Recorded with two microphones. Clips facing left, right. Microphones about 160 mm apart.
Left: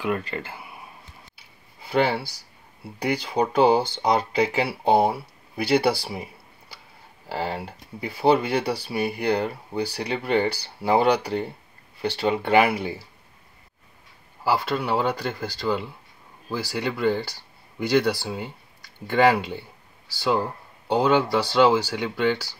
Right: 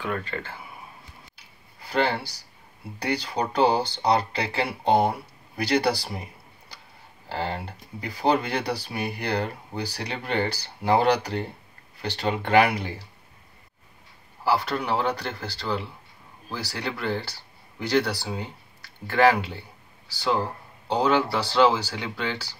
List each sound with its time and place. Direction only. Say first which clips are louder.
0.0 s speech: left 3 dB; 10° left (ahead or behind)
1.9 s speech: left 3 dB; 5° left (ahead or behind)
7.2 s speech: left 1 dB; 5° left (ahead or behind)
14.4 s speech: left 1 dB; 10° left (ahead or behind)
20.9 s speech: left 2 dB; 10° left (ahead or behind)